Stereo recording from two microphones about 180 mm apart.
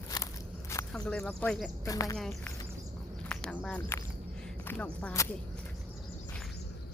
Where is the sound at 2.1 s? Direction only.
Centre (ahead or behind).